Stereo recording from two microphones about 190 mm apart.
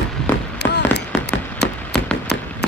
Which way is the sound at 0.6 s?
60° left (ahead or behind).